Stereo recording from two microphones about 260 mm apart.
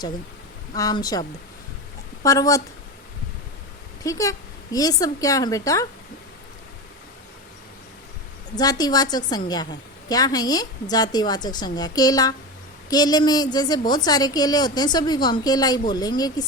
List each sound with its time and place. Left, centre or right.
0.7 s a woman's voice: centre
2.2 s a woman's voice: centre
4.0 s a woman's voice: centre
8.5 s a woman's voice: centre